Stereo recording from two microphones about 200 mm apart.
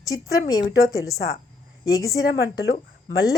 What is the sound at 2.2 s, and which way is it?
Speech, 65° left (ahead or behind).